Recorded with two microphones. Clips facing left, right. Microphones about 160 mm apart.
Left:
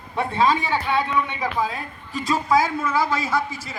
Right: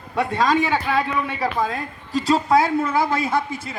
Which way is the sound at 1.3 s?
45° right (ahead or behind).